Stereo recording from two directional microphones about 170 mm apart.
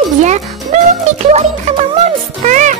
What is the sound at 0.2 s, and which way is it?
Music, 45° right (ahead or behind).